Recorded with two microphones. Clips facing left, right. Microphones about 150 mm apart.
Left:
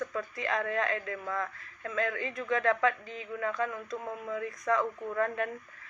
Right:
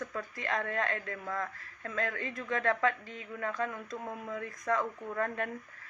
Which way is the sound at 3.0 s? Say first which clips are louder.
Left 3 dB; centre (ahead or behind).